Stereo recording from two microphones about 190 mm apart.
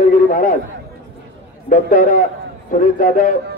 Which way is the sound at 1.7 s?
45° left (ahead or behind).